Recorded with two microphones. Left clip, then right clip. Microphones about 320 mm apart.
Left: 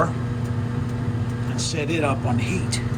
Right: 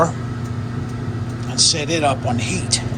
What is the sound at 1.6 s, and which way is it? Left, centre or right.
Speech, centre.